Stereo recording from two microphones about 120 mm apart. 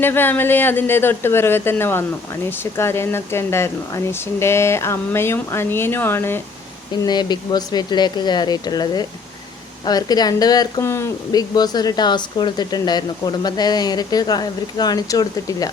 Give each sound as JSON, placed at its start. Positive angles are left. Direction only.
{"t": 0.0, "sound": "speech", "side_deg": 15}
{"t": 7.0, "sound": "speech", "side_deg": 35}